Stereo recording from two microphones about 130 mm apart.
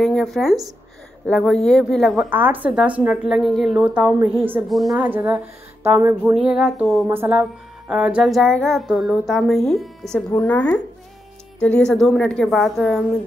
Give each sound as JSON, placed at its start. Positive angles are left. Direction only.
{"t": 0.0, "sound": "speech", "side_deg": 0}
{"t": 1.2, "sound": "music", "side_deg": 5}
{"t": 2.2, "sound": "speech", "side_deg": -15}
{"t": 4.6, "sound": "music", "side_deg": 0}
{"t": 4.9, "sound": "speech", "side_deg": -15}
{"t": 6.3, "sound": "music", "side_deg": -5}
{"t": 7.1, "sound": "speech", "side_deg": -15}
{"t": 7.9, "sound": "music", "side_deg": -5}